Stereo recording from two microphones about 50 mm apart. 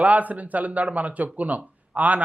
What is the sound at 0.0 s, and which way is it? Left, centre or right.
Speech, right.